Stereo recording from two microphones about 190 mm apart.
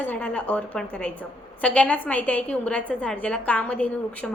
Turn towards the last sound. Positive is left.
turn(degrees=5)  # may be behind; listen again after turning